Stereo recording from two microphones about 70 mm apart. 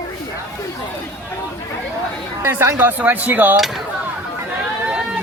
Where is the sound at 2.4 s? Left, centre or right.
Right.